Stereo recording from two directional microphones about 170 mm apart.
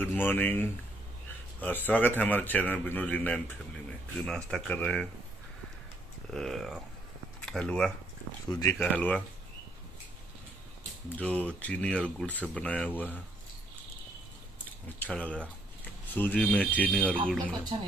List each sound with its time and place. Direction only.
0.0 s a man's voice: 10° left (ahead or behind)
6.3 s speech: centre (ahead or behind)
8.5 s speech: 20° left (ahead or behind)
8.7 s a man's voice: 10° left (ahead or behind)
11.1 s a man's voice: 10° left (ahead or behind)
15.0 s speech: 5° left (ahead or behind)
17.7 s speech: 35° right (ahead or behind)